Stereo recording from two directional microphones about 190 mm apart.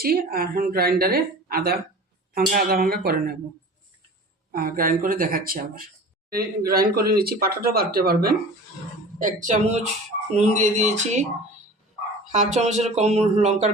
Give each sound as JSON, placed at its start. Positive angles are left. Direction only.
{"t": 0.0, "sound": "a man's voice", "side_deg": -50}
{"t": 4.5, "sound": "a man's voice", "side_deg": -50}
{"t": 9.1, "sound": "speech", "side_deg": -40}
{"t": 12.3, "sound": "speech", "side_deg": -40}